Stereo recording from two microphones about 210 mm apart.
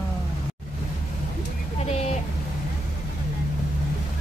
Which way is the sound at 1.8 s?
30° left (ahead or behind).